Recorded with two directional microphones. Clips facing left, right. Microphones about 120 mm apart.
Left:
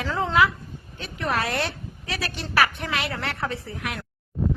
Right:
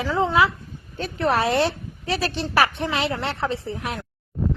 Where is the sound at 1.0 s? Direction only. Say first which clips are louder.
Right 5 dB; 35° right (ahead or behind).